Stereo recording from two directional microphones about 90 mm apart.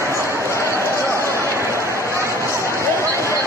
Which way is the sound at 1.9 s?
30° right (ahead or behind).